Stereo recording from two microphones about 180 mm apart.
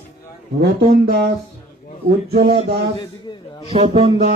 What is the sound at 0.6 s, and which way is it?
Speech, 60° right (ahead or behind).